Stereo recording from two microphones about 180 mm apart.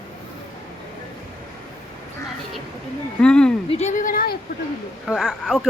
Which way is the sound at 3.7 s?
40° left (ahead or behind).